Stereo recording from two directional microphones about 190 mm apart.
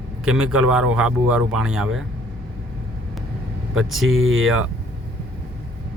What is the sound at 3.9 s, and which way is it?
Speech, 90° right.